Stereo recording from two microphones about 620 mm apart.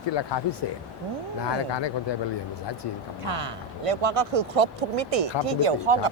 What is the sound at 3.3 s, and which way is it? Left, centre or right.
Speech, right.